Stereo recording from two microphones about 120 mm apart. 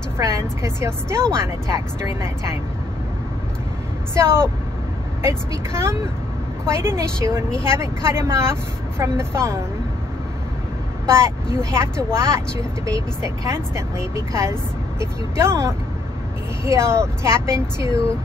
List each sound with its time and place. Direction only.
0.2 s a woman's voice: 25° right (ahead or behind)
4.1 s a woman's voice: 20° right (ahead or behind)
11.1 s a woman's voice: 25° right (ahead or behind)